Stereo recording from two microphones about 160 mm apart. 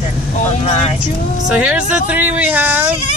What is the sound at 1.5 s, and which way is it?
Speech, 10° right (ahead or behind).